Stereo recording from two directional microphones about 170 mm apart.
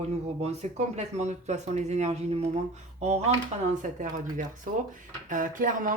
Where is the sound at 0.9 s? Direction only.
40° right (ahead or behind).